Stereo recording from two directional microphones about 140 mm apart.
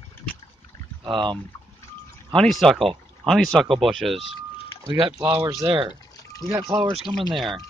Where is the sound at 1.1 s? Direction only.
35° right (ahead or behind).